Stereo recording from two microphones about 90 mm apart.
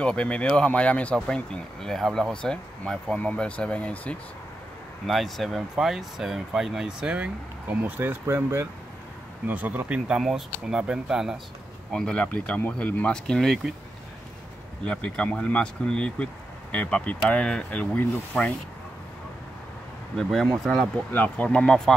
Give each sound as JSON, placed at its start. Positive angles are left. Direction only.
{"t": 0.0, "sound": "speech", "side_deg": 10}
{"t": 5.0, "sound": "speech", "side_deg": 0}
{"t": 7.7, "sound": "speech", "side_deg": -20}
{"t": 11.9, "sound": "speech", "side_deg": 10}
{"t": 14.9, "sound": "speech", "side_deg": 10}
{"t": 20.2, "sound": "speech", "side_deg": 5}
{"t": 21.1, "sound": "speech", "side_deg": 15}